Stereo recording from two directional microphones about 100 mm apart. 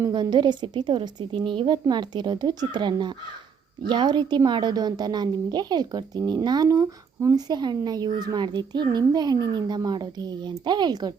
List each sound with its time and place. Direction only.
0.1 s a woman's voice: 50° right (ahead or behind)